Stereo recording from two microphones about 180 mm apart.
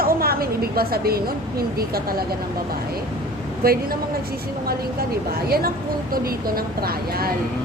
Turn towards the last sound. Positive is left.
turn(degrees=-55)  # may be behind; listen again after turning